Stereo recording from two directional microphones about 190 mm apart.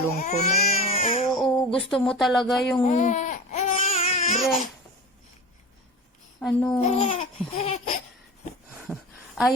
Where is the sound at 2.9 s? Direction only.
40° left (ahead or behind).